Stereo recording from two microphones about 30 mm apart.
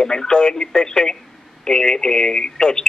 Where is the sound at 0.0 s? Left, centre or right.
Left.